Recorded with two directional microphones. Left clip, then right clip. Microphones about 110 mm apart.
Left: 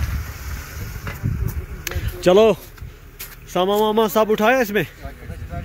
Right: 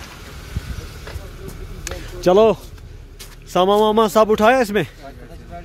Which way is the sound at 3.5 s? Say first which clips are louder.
Right 3 dB; 15° right (ahead or behind).